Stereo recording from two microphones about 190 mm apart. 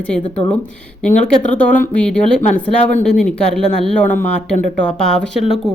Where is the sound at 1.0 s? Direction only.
40° left (ahead or behind).